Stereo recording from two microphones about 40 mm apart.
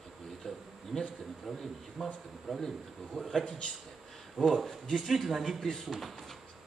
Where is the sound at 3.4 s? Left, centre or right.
Centre.